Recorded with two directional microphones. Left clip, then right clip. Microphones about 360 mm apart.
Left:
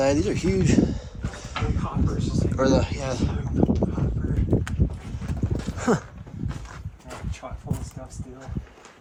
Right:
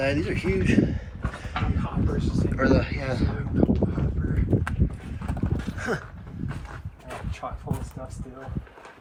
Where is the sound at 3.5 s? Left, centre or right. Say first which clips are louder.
Even; centre.